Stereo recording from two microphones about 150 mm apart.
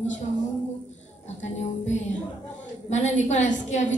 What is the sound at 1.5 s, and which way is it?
A woman's voice, 50° left (ahead or behind).